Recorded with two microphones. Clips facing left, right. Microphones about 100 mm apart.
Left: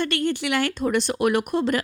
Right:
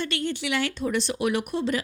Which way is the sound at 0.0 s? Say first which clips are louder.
Left 5 dB; 55° left (ahead or behind).